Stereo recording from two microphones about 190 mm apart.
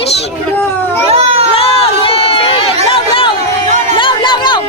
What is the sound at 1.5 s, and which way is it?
Run, 30° left (ahead or behind).